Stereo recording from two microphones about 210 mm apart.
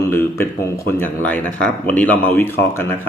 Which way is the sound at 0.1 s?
10° left (ahead or behind).